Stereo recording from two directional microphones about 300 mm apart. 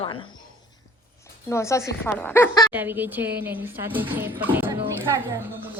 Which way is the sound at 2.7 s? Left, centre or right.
Centre.